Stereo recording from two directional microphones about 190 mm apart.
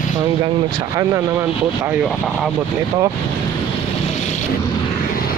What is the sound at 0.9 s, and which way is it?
Speech, 15° right (ahead or behind).